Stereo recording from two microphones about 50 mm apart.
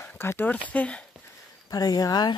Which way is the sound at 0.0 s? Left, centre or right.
Left.